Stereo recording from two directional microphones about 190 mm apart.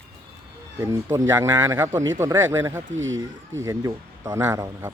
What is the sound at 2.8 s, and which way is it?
Speech, 85° right.